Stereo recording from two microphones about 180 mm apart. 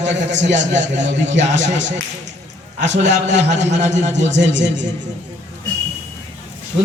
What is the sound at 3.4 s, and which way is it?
Speech, 40° right (ahead or behind).